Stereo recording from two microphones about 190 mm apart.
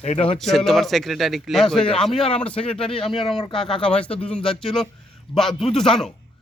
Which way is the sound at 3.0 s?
25° left (ahead or behind).